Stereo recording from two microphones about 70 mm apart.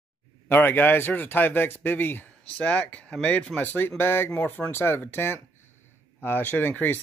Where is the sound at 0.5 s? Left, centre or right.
Left.